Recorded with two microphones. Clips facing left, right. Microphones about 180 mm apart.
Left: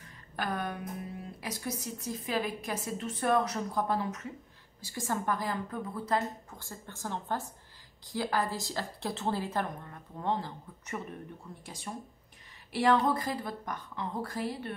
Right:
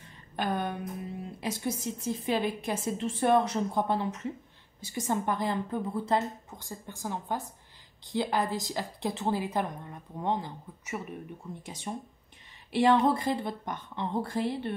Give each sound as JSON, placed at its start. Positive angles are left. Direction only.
{"t": 0.4, "sound": "a woman's voice", "side_deg": -25}
{"t": 11.6, "sound": "a woman's voice", "side_deg": -25}